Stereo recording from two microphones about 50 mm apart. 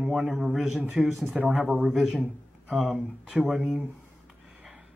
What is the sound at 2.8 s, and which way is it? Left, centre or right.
Speech, centre.